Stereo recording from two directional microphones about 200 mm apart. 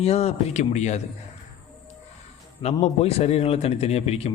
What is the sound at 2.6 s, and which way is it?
Speech, 30° left (ahead or behind).